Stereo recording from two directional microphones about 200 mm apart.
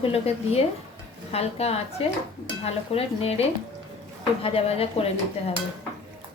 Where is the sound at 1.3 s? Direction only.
30° left (ahead or behind).